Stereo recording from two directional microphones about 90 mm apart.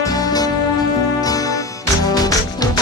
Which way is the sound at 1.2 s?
45° left (ahead or behind).